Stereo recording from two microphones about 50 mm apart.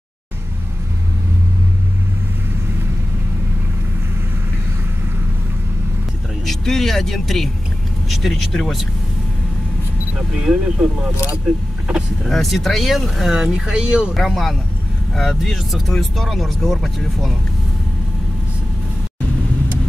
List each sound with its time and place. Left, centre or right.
6.4 s speech: centre
10.1 s speech: centre
12.3 s speech: centre
13.6 s speech: centre
14.1 s speech: centre